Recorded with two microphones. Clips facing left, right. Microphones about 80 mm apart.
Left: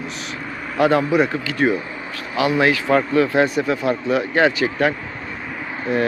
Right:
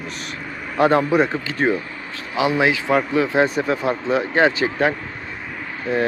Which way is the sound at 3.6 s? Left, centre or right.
Right.